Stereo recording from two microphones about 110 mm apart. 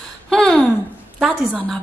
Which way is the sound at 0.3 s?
5° left (ahead or behind).